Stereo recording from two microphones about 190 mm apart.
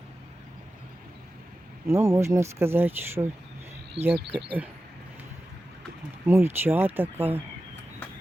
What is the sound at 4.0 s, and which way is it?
Speech, 35° right (ahead or behind).